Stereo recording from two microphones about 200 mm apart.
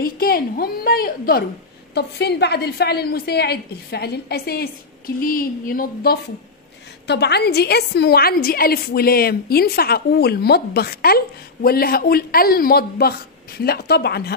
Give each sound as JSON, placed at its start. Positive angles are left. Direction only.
{"t": 0.0, "sound": "a woman's voice", "side_deg": 45}
{"t": 7.1, "sound": "a woman's voice", "side_deg": 55}